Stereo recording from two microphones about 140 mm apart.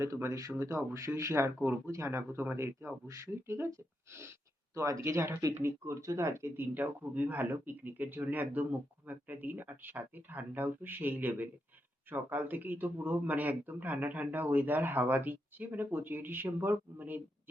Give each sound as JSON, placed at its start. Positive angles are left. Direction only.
{"t": 0.0, "sound": "a man's voice", "side_deg": -20}